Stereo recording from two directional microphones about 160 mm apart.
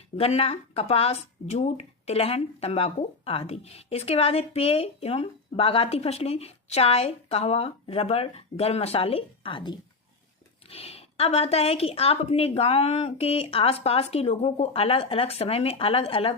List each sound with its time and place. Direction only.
0.2 s speech: 40° left (ahead or behind)